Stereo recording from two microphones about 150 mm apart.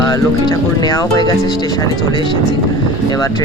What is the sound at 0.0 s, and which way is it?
Speech, 25° left (ahead or behind).